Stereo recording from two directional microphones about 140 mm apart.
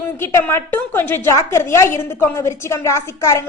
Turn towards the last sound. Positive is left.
turn(degrees=20)  # may be behind; listen again after turning